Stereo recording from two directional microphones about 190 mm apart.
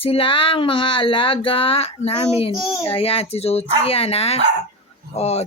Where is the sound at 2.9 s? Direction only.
30° left (ahead or behind).